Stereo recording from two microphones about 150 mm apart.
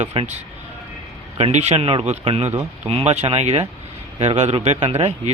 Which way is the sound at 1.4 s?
45° right (ahead or behind).